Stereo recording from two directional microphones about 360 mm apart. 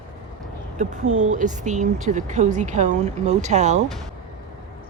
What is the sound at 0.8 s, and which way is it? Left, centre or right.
Speech, right.